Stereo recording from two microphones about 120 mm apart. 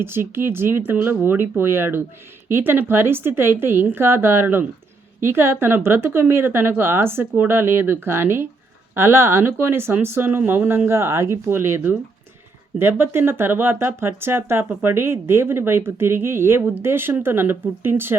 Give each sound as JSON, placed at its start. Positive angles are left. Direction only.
{"t": 0.0, "sound": "speech", "side_deg": -20}